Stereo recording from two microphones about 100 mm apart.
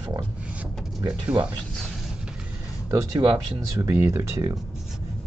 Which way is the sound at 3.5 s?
30° right (ahead or behind).